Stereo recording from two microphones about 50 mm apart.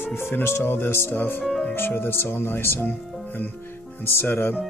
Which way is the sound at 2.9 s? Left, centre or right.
Left.